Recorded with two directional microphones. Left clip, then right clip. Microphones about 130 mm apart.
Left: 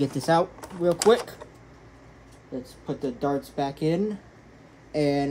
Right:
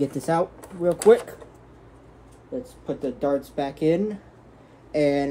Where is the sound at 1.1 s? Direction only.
25° left (ahead or behind).